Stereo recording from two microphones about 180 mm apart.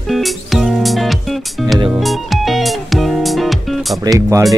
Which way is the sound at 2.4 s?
Centre (ahead or behind).